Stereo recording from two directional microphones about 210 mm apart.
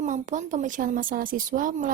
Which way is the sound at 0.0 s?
35° right (ahead or behind).